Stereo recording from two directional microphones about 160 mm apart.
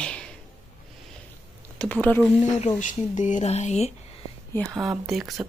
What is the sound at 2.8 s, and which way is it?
Speech, 50° left (ahead or behind).